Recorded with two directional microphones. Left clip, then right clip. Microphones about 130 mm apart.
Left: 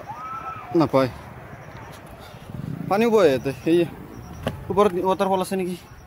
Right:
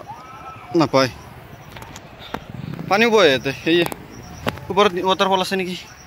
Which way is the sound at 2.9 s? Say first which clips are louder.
Right 3 dB; 10° left (ahead or behind).